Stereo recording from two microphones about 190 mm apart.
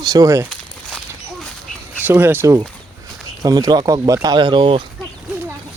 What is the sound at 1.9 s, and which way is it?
Speech, 10° right (ahead or behind).